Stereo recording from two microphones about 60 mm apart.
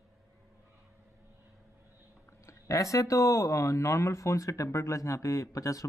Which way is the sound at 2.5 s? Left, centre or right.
Left.